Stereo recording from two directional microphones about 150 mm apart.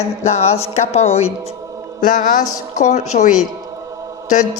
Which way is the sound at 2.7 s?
50° left (ahead or behind).